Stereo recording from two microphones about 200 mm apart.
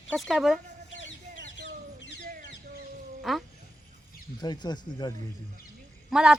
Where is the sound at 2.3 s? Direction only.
45° right (ahead or behind).